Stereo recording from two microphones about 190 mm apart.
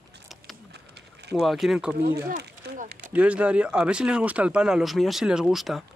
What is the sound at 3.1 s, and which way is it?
Speech, 5° right (ahead or behind).